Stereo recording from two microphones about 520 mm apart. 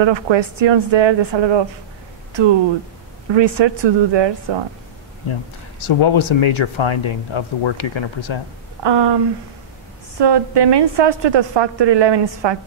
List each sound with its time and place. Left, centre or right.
0.0 s a woman's voice: right
3.3 s a woman's voice: right
5.3 s speech: left
8.8 s a woman's voice: right